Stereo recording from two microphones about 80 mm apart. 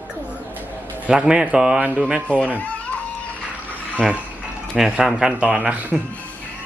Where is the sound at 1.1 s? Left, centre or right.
Centre.